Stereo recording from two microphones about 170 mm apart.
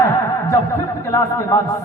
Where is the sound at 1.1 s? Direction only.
20° left (ahead or behind).